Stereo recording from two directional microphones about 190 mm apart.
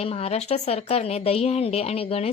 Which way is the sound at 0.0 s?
30° left (ahead or behind).